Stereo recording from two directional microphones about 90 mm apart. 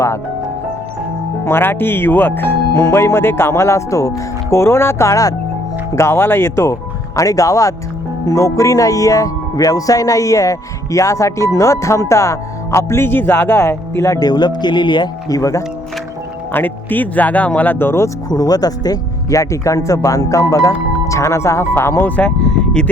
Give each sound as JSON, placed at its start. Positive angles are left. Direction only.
{"t": 1.5, "sound": "speech", "side_deg": 25}
{"t": 14.2, "sound": "speech", "side_deg": 50}
{"t": 15.4, "sound": "speech", "side_deg": 35}
{"t": 16.5, "sound": "speech", "side_deg": 20}
{"t": 18.3, "sound": "speech", "side_deg": 45}